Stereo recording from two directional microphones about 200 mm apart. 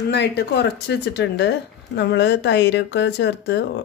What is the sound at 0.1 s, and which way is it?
Speech, 60° left (ahead or behind).